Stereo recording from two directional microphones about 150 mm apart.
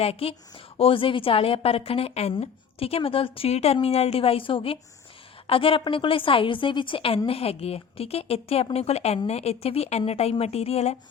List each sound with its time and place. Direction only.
0.0 s a woman's voice: 40° left (ahead or behind)